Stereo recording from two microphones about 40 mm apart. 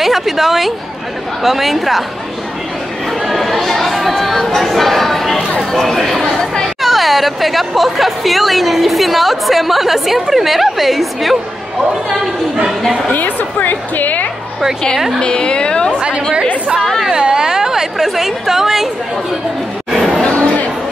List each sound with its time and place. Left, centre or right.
0.0 s speech: centre
3.3 s chatter: centre
4.6 s speech: centre
13.1 s a woman's voice: left
15.1 s a woman's voice: left
15.9 s a woman's voice: right; by 18.9 s centre
20.2 s a sound: left